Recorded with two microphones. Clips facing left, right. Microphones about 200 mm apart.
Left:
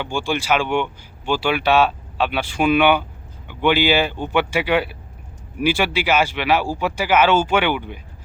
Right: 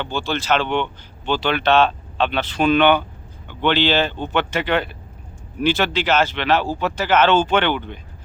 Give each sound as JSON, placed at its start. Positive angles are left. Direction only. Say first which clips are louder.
{"t": 0.0, "sound": "speech", "louder": "left 1 dB", "side_deg": 10}